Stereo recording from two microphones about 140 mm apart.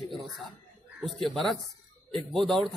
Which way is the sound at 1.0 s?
Centre (ahead or behind).